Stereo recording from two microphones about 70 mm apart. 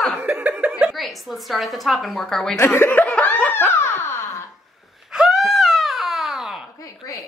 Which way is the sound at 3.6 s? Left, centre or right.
Left.